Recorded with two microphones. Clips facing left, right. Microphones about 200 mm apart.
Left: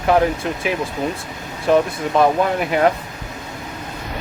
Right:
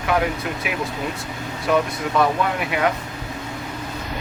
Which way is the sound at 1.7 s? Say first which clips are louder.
Left 4 dB; 35° left (ahead or behind).